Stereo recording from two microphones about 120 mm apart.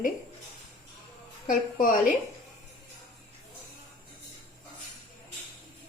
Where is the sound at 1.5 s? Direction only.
90° left.